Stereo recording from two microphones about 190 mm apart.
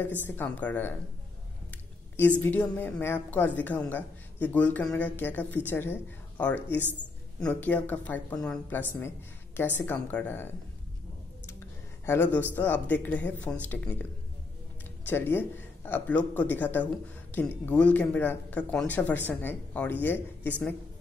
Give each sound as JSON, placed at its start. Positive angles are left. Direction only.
{"t": 0.2, "sound": "speech", "side_deg": 10}
{"t": 2.4, "sound": "speech", "side_deg": 10}
{"t": 12.1, "sound": "speech", "side_deg": 10}
{"t": 15.0, "sound": "speech", "side_deg": 10}